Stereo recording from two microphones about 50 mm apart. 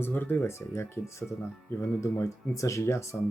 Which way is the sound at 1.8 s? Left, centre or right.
Left.